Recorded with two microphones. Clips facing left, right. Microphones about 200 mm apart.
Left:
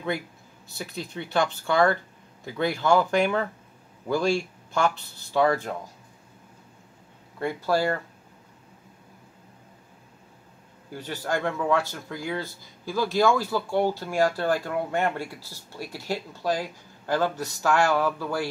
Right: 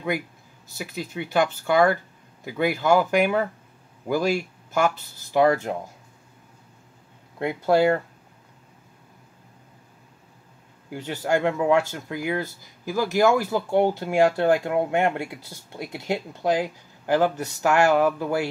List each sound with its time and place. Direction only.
0.7 s speech: 10° right (ahead or behind)
7.3 s speech: 20° right (ahead or behind)
10.9 s speech: 15° right (ahead or behind)